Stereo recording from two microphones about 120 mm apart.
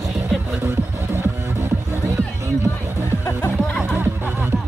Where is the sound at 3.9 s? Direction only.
20° right (ahead or behind).